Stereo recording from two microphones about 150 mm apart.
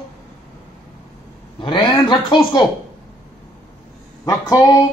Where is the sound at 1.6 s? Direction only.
30° left (ahead or behind).